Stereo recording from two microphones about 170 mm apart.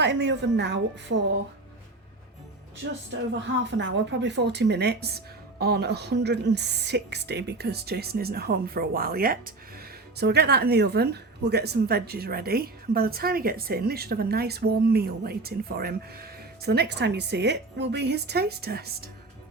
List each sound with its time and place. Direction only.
0.0 s a woman's voice: 90° right
3.6 s speech: 90° right; by 9.4 s 60° right (ahead or behind)
10.2 s a woman's voice: 70° right (ahead or behind)